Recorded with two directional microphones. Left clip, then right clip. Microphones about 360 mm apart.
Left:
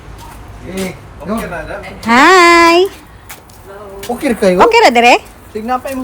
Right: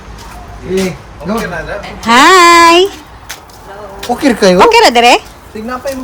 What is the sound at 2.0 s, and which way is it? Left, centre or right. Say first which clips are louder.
Speech: right 2 dB; centre.